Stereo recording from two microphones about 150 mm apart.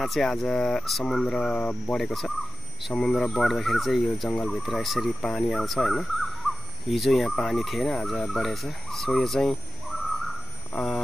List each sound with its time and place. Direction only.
0.0 s speech: centre (ahead or behind)
10.7 s alarm clock: 5° left (ahead or behind)